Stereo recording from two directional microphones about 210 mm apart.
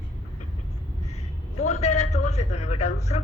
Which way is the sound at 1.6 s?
30° left (ahead or behind).